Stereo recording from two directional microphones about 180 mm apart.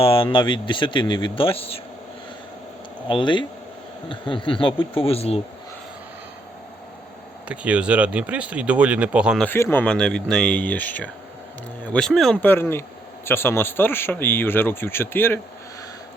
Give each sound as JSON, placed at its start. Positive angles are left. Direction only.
{"t": 0.0, "sound": "speech", "side_deg": 30}
{"t": 3.1, "sound": "speech", "side_deg": 25}
{"t": 7.4, "sound": "speech", "side_deg": -5}
{"t": 9.4, "sound": "speech", "side_deg": 10}